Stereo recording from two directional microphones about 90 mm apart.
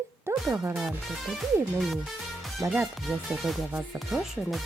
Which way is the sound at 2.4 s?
5° right (ahead or behind).